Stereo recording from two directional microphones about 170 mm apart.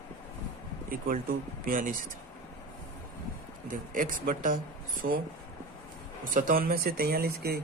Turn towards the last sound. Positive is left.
turn(degrees=-65)  # may be behind; listen again after turning